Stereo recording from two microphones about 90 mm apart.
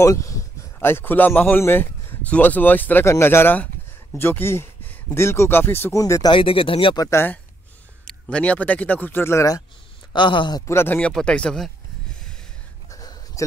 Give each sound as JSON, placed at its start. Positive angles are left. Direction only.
{"t": 0.0, "sound": "speech", "side_deg": 35}
{"t": 0.7, "sound": "a man's voice", "side_deg": 25}
{"t": 5.9, "sound": "speech", "side_deg": 35}
{"t": 6.3, "sound": "speech", "side_deg": 80}
{"t": 7.0, "sound": "speech", "side_deg": 30}
{"t": 8.1, "sound": "speech", "side_deg": 10}
{"t": 10.1, "sound": "speech", "side_deg": 60}
{"t": 10.7, "sound": "speech", "side_deg": 25}
{"t": 11.0, "sound": "speech", "side_deg": 10}
{"t": 12.9, "sound": "a sound", "side_deg": 40}